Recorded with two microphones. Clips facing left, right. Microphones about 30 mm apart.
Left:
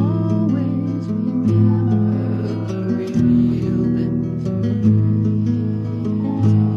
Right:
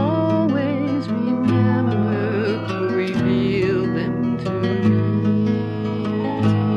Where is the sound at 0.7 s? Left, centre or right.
Right.